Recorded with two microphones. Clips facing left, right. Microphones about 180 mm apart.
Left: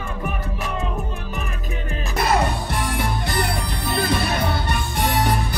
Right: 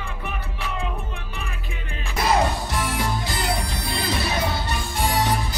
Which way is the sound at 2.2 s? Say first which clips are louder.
Even; 60° left (ahead or behind).